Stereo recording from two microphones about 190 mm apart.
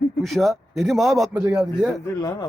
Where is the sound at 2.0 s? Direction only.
20° left (ahead or behind).